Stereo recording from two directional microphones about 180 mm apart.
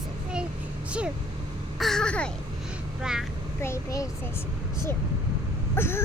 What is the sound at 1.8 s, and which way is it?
Speech, centre (ahead or behind).